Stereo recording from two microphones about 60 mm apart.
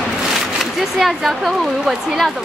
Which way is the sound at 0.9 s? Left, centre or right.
Centre.